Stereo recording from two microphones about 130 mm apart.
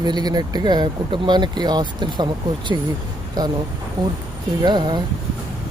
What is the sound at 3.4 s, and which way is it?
Speech, 30° right (ahead or behind).